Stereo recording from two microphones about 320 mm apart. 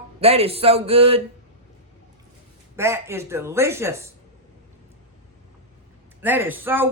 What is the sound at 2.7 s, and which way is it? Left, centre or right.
Speech, centre.